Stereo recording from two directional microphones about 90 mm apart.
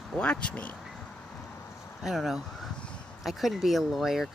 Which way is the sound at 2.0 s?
5° right (ahead or behind).